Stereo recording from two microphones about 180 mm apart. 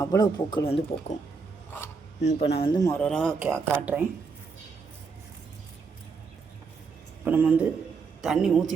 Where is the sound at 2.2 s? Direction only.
40° left (ahead or behind).